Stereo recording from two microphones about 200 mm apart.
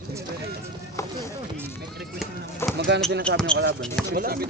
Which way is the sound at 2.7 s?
60° right (ahead or behind).